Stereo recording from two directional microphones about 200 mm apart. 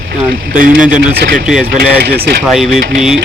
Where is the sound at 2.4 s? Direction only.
Centre (ahead or behind).